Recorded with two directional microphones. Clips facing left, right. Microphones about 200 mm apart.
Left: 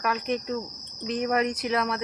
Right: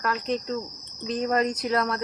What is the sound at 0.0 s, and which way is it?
Speech, 15° left (ahead or behind).